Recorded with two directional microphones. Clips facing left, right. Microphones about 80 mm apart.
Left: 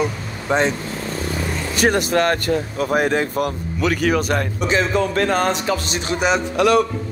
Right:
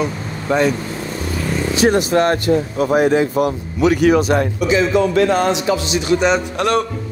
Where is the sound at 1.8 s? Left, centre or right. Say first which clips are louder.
Right 3 dB; left.